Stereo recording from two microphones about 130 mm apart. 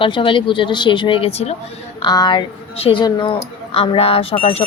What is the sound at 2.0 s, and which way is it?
A woman's voice, 35° left (ahead or behind).